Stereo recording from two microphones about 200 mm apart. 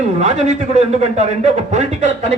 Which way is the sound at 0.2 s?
35° right (ahead or behind).